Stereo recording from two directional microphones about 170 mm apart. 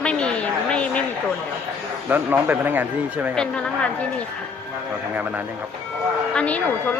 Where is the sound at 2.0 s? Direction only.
10° right (ahead or behind).